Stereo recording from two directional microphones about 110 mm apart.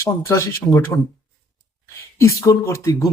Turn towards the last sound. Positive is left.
turn(degrees=30)  # may be behind; listen again after turning